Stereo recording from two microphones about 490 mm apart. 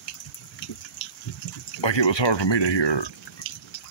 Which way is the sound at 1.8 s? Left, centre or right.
Left.